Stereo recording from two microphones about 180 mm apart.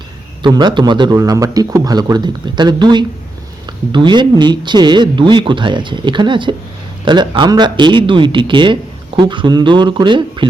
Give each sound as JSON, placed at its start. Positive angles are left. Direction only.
{"t": 0.4, "sound": "a man's voice", "side_deg": -25}